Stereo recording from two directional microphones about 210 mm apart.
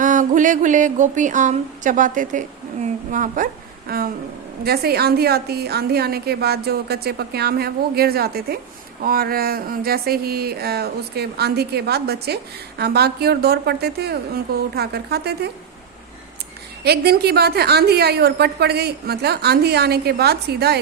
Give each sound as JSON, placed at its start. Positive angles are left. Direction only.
{"t": 0.0, "sound": "a sound", "side_deg": -35}
{"t": 2.8, "sound": "a woman's voice", "side_deg": -40}
{"t": 16.8, "sound": "a woman's voice", "side_deg": -50}